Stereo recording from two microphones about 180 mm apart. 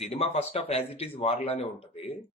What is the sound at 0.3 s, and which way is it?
Speech, 35° left (ahead or behind).